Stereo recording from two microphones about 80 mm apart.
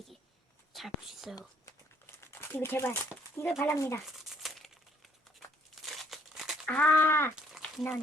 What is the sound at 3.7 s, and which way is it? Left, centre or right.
Speech, left.